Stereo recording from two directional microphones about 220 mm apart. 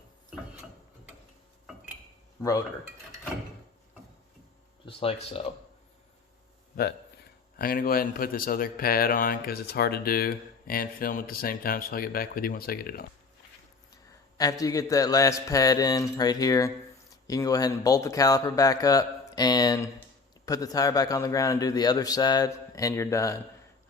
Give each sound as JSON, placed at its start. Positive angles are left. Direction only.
{"t": 2.4, "sound": "speech", "side_deg": 15}
{"t": 4.9, "sound": "speech", "side_deg": 25}
{"t": 7.5, "sound": "speech", "side_deg": 40}
{"t": 13.9, "sound": "a man's voice", "side_deg": 15}